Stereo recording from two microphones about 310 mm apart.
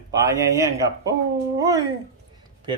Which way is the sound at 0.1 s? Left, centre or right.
Centre.